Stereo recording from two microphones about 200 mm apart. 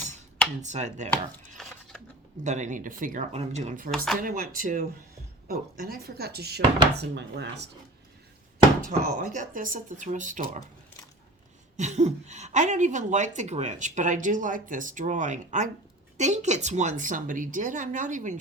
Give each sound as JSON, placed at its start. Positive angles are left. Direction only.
{"t": 0.6, "sound": "speech", "side_deg": -35}
{"t": 1.1, "sound": "chopping", "side_deg": 5}
{"t": 2.4, "sound": "speech", "side_deg": -35}
{"t": 3.9, "sound": "speech", "side_deg": 0}
{"t": 4.2, "sound": "speech", "side_deg": -45}
{"t": 8.9, "sound": "speech", "side_deg": -40}
{"t": 11.8, "sound": "speech", "side_deg": -35}